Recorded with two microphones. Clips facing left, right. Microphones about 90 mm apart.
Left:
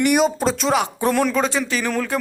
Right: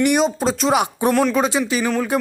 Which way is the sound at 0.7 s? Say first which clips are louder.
Right 2 dB; 15° right (ahead or behind).